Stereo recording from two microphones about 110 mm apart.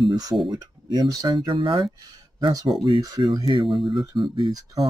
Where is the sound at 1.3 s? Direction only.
50° right (ahead or behind).